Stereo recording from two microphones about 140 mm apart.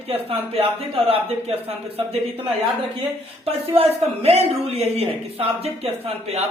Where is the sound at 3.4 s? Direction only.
45° right (ahead or behind).